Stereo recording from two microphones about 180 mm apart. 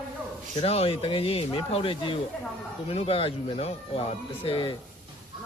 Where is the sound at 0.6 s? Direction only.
35° left (ahead or behind).